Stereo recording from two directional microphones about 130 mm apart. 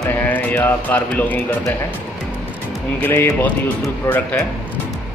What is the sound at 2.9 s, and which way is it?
Speech, 15° left (ahead or behind).